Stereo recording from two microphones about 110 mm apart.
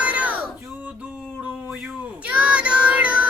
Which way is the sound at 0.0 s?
15° right (ahead or behind).